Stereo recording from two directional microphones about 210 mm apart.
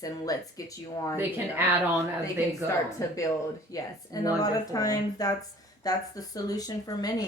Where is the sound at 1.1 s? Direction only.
10° right (ahead or behind).